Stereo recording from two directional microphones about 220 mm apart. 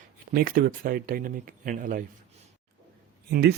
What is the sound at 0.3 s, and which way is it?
Speech, 40° right (ahead or behind).